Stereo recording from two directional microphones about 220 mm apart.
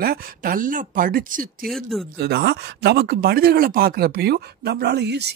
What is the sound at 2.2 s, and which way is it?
Speech, 50° right (ahead or behind).